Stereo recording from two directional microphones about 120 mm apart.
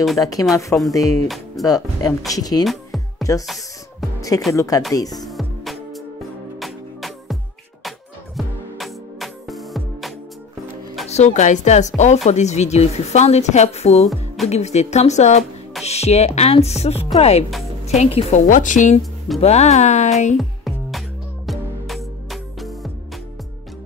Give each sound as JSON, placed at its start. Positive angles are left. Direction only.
{"t": 0.2, "sound": "speech", "side_deg": 30}
{"t": 2.6, "sound": "music", "side_deg": 0}
{"t": 4.6, "sound": "speech", "side_deg": 30}
{"t": 5.2, "sound": "music", "side_deg": 0}
{"t": 8.4, "sound": "music", "side_deg": 0}
{"t": 11.1, "sound": "a woman's voice", "side_deg": 80}
{"t": 14.0, "sound": "music", "side_deg": 0}
{"t": 14.5, "sound": "a woman's voice", "side_deg": 70}
{"t": 19.4, "sound": "a woman's voice", "side_deg": 70}
{"t": 20.3, "sound": "music", "side_deg": 0}